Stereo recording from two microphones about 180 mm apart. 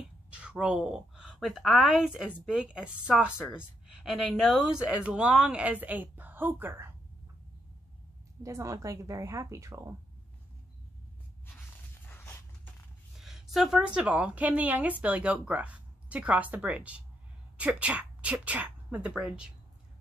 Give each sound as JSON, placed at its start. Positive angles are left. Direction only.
{"t": 0.3, "sound": "a woman's voice", "side_deg": -5}
{"t": 8.4, "sound": "a woman's voice", "side_deg": -15}
{"t": 12.1, "sound": "a sound", "side_deg": 10}
{"t": 13.2, "sound": "a woman's voice", "side_deg": 0}